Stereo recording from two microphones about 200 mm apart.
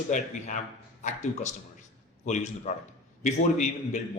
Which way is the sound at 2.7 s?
40° left (ahead or behind).